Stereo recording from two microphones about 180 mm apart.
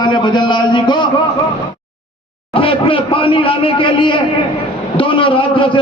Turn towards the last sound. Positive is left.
turn(degrees=25)  # may be behind; listen again after turning